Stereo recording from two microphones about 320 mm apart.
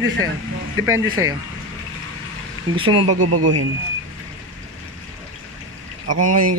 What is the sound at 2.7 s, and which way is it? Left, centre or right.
Speech, centre.